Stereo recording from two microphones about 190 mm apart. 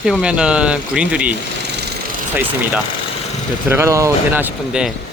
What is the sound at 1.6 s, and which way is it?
Jackhammer, 65° right (ahead or behind).